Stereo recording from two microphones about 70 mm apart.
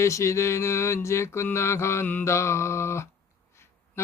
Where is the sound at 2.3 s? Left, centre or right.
Left.